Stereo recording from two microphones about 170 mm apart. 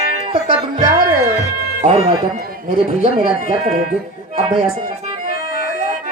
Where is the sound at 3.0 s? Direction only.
40° right (ahead or behind).